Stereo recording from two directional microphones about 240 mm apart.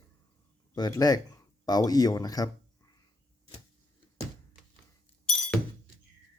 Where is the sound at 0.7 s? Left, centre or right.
Centre.